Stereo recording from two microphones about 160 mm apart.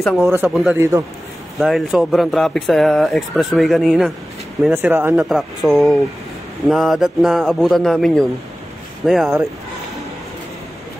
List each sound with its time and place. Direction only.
0.0 s speech: centre (ahead or behind)
0.3 s speech: 15° right (ahead or behind)
1.6 s speech: centre (ahead or behind)
4.7 s speech: 15° right (ahead or behind)
5.1 s speech: centre (ahead or behind)